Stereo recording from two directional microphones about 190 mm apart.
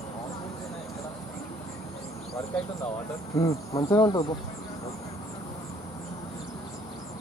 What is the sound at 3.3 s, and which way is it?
Insect, 15° left (ahead or behind).